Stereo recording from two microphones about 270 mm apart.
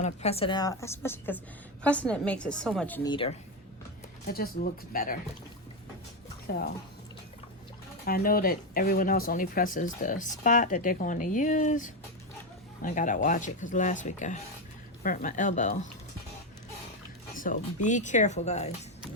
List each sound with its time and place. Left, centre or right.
0.0 s a woman's voice: left; by 3.1 s centre
3.1 s speech: centre
4.3 s speech: left
6.5 s speech: left
8.0 s speech: left
17.3 s speech: left